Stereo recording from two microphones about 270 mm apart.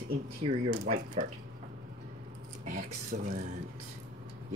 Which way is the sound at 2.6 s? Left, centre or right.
Right.